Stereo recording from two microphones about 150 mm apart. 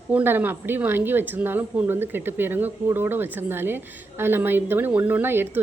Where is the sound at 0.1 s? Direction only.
10° right (ahead or behind).